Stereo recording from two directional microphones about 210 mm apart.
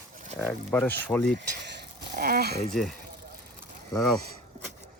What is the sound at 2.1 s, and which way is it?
Speech, 45° right (ahead or behind).